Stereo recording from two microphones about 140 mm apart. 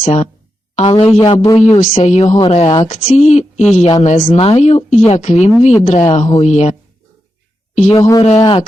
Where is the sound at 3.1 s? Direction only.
55° left (ahead or behind).